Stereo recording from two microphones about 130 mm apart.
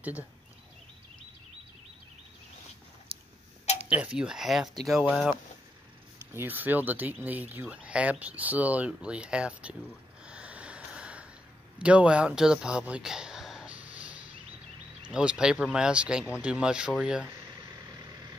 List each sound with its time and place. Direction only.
3.1 s a sound: 45° right (ahead or behind)
3.9 s speech: 5° right (ahead or behind)
6.1 s speech: 15° right (ahead or behind)
10.2 s snort: 10° right (ahead or behind)
11.8 s a sound: 10° right (ahead or behind)
15.0 s speech: 5° right (ahead or behind)